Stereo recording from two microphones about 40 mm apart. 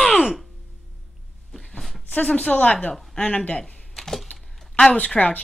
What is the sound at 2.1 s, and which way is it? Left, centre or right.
A woman's voice, left.